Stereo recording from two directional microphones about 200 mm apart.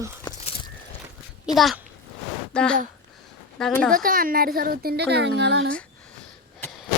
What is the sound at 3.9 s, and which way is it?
A woman's voice, 45° right (ahead or behind).